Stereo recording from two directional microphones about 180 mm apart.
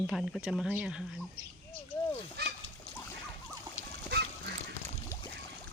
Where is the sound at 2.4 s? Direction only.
65° right (ahead or behind).